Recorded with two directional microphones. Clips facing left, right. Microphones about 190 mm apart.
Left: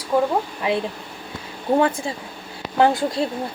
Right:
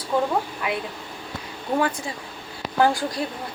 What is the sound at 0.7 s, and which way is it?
Speech, 30° left (ahead or behind).